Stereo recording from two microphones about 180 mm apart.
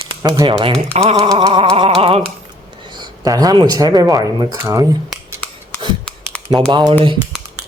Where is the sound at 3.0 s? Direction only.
20° right (ahead or behind).